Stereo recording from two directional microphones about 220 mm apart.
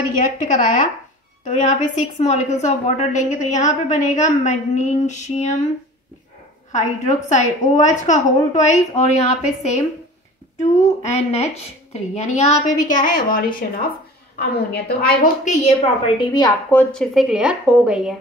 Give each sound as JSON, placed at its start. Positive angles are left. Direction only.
{"t": 0.2, "sound": "a woman's voice", "side_deg": 35}
{"t": 6.7, "sound": "a woman's voice", "side_deg": 30}
{"t": 16.2, "sound": "a woman's voice", "side_deg": 15}
{"t": 16.9, "sound": "a woman's voice", "side_deg": 0}